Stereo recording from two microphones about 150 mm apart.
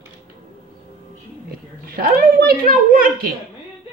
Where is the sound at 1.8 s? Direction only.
80° right.